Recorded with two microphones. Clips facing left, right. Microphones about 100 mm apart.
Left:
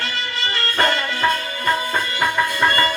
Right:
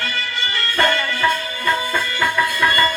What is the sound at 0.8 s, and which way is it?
Music, 30° left (ahead or behind).